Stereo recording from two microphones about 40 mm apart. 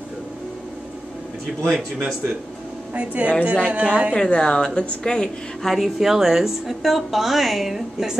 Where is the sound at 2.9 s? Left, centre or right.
Right.